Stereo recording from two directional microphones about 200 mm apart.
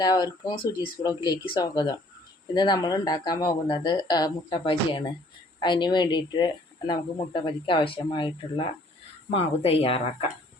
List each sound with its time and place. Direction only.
0.0 s speech: 20° left (ahead or behind)